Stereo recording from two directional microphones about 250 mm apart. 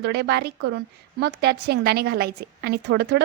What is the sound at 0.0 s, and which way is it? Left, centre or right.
A woman's voice, right.